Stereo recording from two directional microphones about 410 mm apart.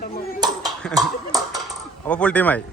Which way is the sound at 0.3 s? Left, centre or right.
Centre.